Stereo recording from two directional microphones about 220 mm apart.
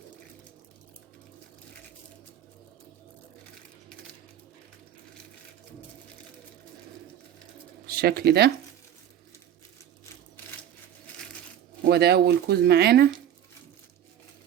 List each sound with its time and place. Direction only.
7.9 s speech: 45° right (ahead or behind)
11.9 s speech: 45° right (ahead or behind)